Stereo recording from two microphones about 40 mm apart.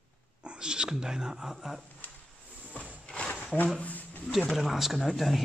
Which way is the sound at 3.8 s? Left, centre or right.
Left.